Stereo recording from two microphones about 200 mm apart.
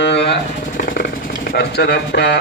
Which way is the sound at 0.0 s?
60° left (ahead or behind).